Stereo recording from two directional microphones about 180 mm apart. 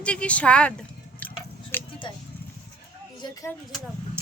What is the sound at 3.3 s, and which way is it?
Speech, 15° left (ahead or behind).